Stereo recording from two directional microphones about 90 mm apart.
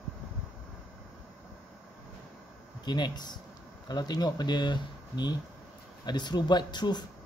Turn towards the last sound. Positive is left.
turn(degrees=55)  # may be behind; listen again after turning